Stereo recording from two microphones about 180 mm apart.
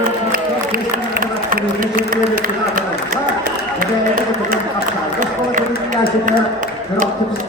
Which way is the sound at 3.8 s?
50° right (ahead or behind).